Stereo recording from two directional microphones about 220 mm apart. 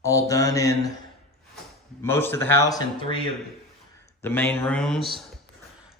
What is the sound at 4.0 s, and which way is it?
A man's voice, 10° left (ahead or behind).